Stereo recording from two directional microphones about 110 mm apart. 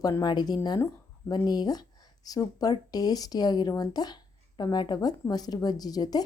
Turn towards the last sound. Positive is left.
turn(degrees=35)  # may be behind; listen again after turning